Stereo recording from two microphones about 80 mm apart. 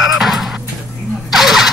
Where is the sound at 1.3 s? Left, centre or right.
Centre.